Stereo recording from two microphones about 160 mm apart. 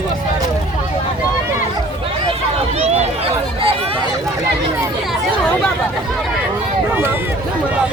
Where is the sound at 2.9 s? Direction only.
40° right (ahead or behind).